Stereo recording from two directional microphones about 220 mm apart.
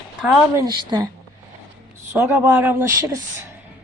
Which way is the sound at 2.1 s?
10° right (ahead or behind).